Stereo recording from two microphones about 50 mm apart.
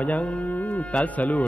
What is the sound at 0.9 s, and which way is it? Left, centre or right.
Speech, left.